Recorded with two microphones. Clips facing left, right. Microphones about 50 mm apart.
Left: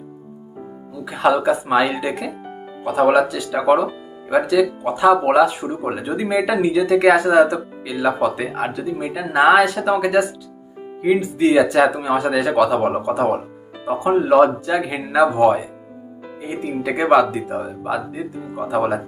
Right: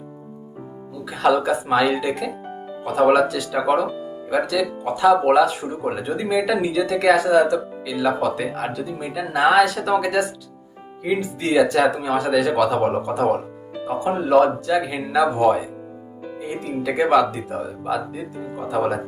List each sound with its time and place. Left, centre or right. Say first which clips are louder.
1.0 s speech: left 2 dB; centre
7.3 s speech: left 2 dB; left
7.9 s speech: left 2 dB; centre
13.8 s speech: left 5 dB; left
15.4 s speech: left 2 dB; centre
16.4 s speech: left 2 dB; centre
17.0 s speech: left 3 dB; centre